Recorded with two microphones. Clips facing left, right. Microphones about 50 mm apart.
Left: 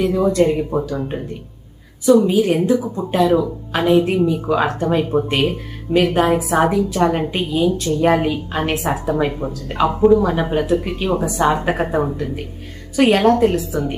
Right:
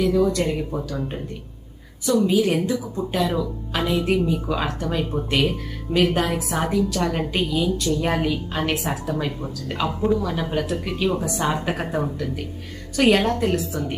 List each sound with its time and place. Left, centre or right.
0.0 s speech: left
0.9 s a woman's voice: centre
2.3 s a woman's voice: left
6.9 s a woman's voice: left
11.3 s speech: centre
11.5 s a woman's voice: left
12.1 s a woman's voice: left
13.6 s speech: centre